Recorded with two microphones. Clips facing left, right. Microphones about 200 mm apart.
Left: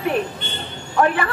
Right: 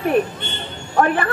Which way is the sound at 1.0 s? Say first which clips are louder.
Right 1 dB; 45° right (ahead or behind).